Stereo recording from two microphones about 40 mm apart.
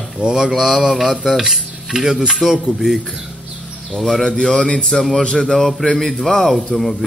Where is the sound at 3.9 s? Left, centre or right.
Centre.